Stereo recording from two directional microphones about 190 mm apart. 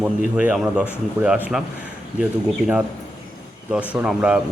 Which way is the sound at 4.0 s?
5° right (ahead or behind).